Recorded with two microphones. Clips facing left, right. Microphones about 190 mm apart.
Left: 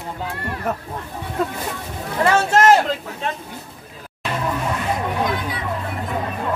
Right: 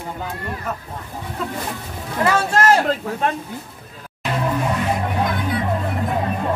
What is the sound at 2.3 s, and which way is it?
Speech, 25° left (ahead or behind).